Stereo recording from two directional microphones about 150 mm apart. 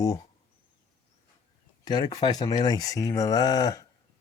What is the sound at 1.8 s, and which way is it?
Speech, 25° left (ahead or behind).